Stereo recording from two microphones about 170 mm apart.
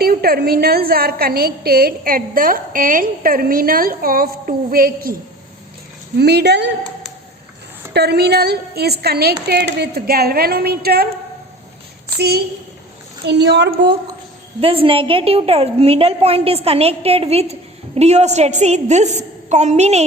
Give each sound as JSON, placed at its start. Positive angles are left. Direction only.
{"t": 0.0, "sound": "a woman's voice", "side_deg": -65}
{"t": 6.1, "sound": "a woman's voice", "side_deg": -75}
{"t": 7.9, "sound": "a woman's voice", "side_deg": -70}
{"t": 13.2, "sound": "a woman's voice", "side_deg": -90}
{"t": 14.6, "sound": "a woman's voice", "side_deg": -35}